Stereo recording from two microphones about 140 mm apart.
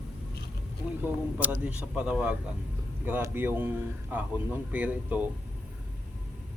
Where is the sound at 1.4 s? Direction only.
10° right (ahead or behind).